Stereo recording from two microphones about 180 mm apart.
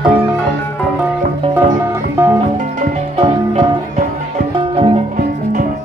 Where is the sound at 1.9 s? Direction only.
15° right (ahead or behind).